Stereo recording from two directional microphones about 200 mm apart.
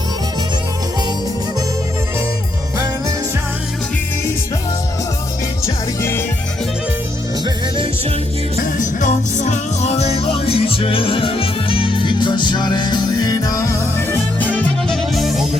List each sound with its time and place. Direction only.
5.6 s music: 10° left (ahead or behind)
8.6 s music: 40° left (ahead or behind); by 15.4 s centre (ahead or behind)